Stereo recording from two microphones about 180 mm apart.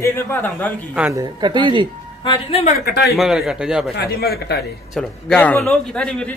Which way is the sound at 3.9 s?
60° left (ahead or behind).